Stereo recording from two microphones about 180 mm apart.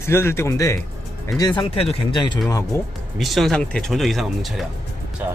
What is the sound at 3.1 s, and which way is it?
Speech, centre (ahead or behind).